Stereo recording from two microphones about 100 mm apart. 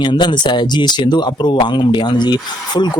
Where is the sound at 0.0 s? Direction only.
50° left (ahead or behind).